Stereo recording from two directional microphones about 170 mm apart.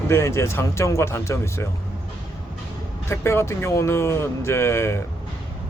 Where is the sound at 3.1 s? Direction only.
15° left (ahead or behind).